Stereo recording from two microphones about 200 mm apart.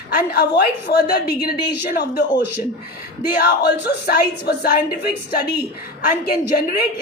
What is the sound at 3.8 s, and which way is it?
A woman's voice, 50° left (ahead or behind).